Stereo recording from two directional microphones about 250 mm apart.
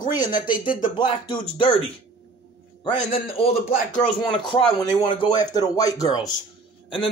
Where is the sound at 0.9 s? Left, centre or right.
Centre.